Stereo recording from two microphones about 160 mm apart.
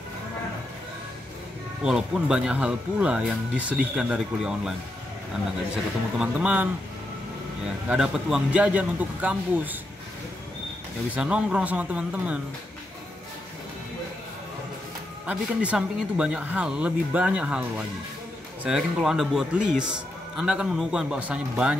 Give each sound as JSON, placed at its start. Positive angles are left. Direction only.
{"t": 1.8, "sound": "speech", "side_deg": -5}
{"t": 6.1, "sound": "speech", "side_deg": -10}
{"t": 7.9, "sound": "speech", "side_deg": -5}
{"t": 11.1, "sound": "speech", "side_deg": -5}
{"t": 15.2, "sound": "speech", "side_deg": -10}